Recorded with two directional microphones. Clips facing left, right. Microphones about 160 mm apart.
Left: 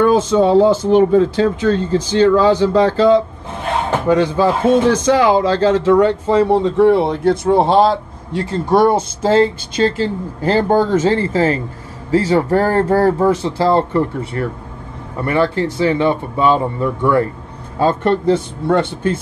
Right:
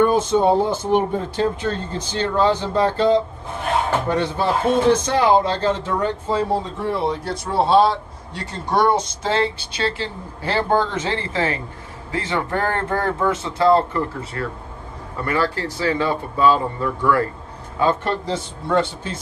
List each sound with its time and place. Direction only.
0.0 s speech: 90° left; by 7.5 s 60° left (ahead or behind)
7.6 s speech: 45° left (ahead or behind); by 17.3 s 25° left (ahead or behind)
17.7 s speech: 50° left (ahead or behind)